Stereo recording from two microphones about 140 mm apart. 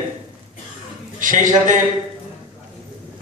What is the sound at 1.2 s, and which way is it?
Speech, 65° right (ahead or behind).